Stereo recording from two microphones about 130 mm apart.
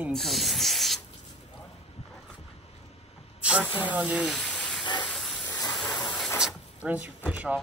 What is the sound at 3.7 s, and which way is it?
Speech, 10° right (ahead or behind).